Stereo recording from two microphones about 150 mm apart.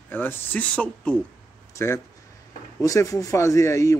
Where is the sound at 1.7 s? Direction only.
20° left (ahead or behind).